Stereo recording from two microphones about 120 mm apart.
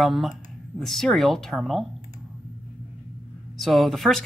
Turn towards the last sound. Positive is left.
turn(degrees=0)  # may be behind; listen again after turning